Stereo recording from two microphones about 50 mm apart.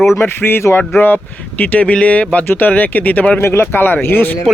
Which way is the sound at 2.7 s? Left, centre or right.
Left.